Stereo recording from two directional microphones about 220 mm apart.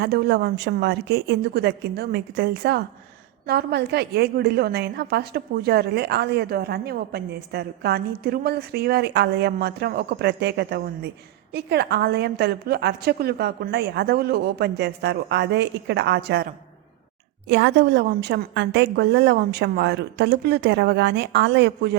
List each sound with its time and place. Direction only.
0.0 s a woman's voice: 50° right (ahead or behind)
17.5 s a woman's voice: 55° right (ahead or behind)